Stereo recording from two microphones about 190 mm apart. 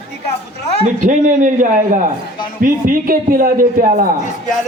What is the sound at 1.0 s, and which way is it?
A man's voice, 40° right (ahead or behind).